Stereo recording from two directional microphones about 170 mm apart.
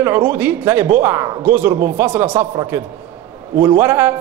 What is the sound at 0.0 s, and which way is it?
A man's voice, 10° right (ahead or behind).